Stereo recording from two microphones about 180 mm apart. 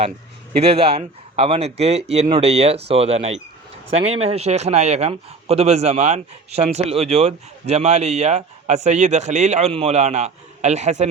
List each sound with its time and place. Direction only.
0.8 s a man's voice: 35° right (ahead or behind)